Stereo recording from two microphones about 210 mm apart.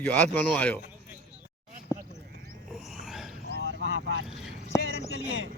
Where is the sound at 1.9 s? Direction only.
15° left (ahead or behind).